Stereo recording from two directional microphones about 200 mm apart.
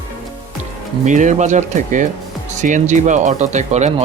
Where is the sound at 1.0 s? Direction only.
40° right (ahead or behind).